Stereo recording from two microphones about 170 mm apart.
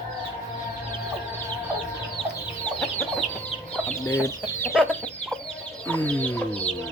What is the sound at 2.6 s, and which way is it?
Chicken, 10° left (ahead or behind).